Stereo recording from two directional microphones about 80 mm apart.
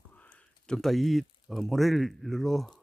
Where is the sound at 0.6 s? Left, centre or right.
Centre.